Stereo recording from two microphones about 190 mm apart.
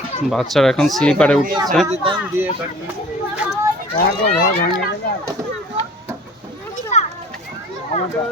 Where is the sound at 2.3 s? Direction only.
10° right (ahead or behind).